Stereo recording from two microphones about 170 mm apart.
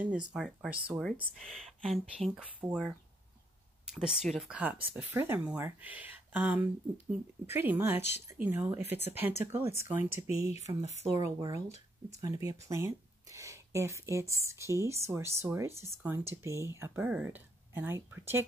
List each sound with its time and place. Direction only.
0.0 s speech: 5° right (ahead or behind)
11.1 s speech: 20° right (ahead or behind)